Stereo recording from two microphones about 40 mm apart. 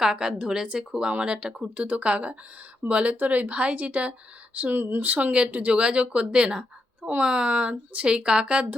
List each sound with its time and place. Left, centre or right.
0.0 s a woman's voice: centre
1.7 s speech: right
4.7 s speech: right
5.0 s speech: right
5.7 s a woman's voice: right